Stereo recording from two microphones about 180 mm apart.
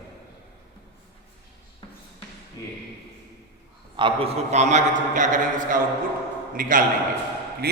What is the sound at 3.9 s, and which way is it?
A man's voice, 30° right (ahead or behind).